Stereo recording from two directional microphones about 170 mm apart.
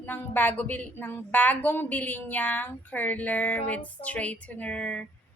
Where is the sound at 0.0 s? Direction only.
10° left (ahead or behind).